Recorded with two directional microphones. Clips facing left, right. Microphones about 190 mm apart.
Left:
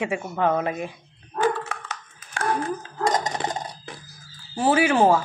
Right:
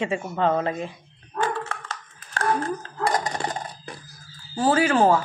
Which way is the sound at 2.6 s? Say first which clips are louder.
Left 1 dB; 15° left (ahead or behind).